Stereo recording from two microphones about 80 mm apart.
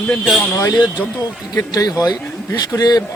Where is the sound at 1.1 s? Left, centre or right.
Left.